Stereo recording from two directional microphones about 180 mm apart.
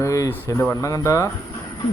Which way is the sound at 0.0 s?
15° left (ahead or behind).